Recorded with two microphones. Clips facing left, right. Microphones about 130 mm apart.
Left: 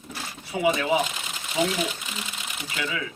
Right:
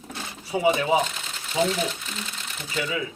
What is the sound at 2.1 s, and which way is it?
Sewing machine, 5° left (ahead or behind).